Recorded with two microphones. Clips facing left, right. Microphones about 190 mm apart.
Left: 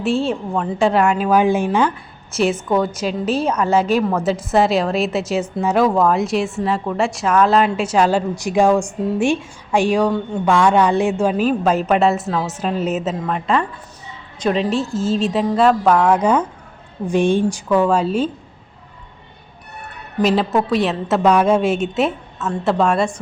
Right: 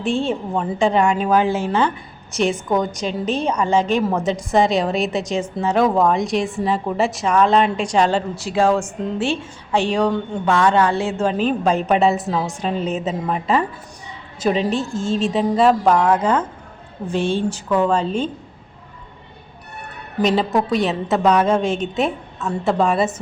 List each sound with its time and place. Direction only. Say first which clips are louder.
0.0 s a woman's voice: left 2 dB; centre (ahead or behind)
2.3 s a woman's voice: left 2 dB; centre (ahead or behind)
16.1 s a woman's voice: left 2 dB; 15° left (ahead or behind)
20.2 s a woman's voice: left 1 dB; centre (ahead or behind)